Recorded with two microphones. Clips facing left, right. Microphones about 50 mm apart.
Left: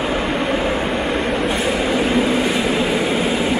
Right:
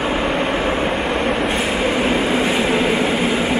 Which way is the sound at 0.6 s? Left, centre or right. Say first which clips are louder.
Right 1 dB; centre.